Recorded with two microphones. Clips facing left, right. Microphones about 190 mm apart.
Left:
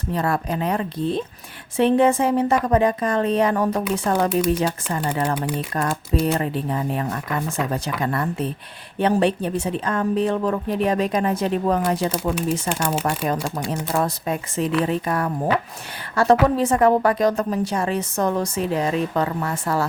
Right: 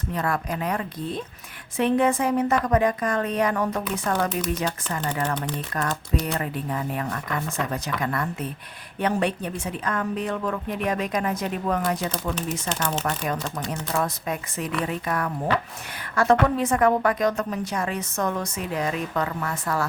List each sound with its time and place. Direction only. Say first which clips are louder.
0.1 s a woman's voice: left 4 dB; 30° left (ahead or behind)
12.6 s speech: left 4 dB; 10° left (ahead or behind)
13.7 s a woman's voice: left 3 dB; 30° left (ahead or behind)